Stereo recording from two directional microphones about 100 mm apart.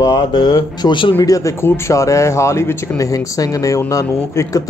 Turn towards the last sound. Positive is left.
turn(degrees=35)  # may be behind; listen again after turning